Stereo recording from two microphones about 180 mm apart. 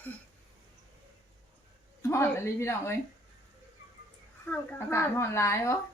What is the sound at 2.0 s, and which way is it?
Speech, 15° left (ahead or behind).